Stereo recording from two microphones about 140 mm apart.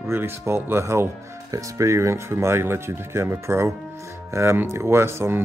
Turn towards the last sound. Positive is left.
turn(degrees=-20)  # may be behind; listen again after turning